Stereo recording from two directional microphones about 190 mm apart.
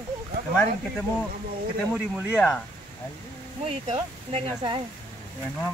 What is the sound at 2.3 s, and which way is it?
Speech, 10° left (ahead or behind).